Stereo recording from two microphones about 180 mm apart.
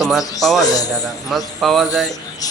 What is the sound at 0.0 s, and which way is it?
Speech, centre (ahead or behind).